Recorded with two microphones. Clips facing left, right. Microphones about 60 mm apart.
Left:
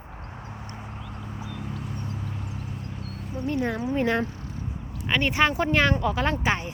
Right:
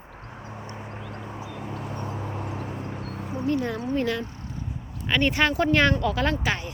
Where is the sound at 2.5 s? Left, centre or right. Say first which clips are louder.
Right 4 dB; right.